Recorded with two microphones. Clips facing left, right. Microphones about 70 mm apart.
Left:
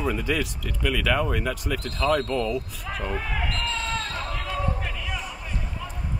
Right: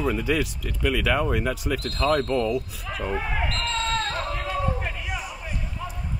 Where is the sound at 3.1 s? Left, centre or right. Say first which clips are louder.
Right 4 dB; centre.